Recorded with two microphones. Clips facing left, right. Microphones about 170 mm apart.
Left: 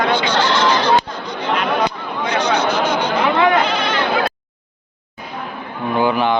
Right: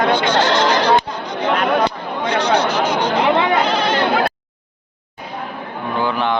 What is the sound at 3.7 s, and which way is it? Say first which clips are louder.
Bleat: right 2 dB; 40° right (ahead or behind).